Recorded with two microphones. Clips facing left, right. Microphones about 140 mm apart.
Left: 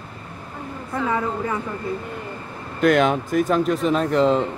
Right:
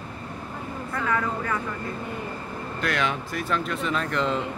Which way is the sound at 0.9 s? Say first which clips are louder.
Left 4 dB; 20° left (ahead or behind).